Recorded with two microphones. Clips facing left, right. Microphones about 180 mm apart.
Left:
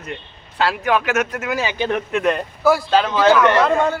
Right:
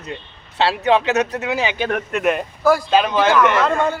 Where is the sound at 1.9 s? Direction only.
5° right (ahead or behind).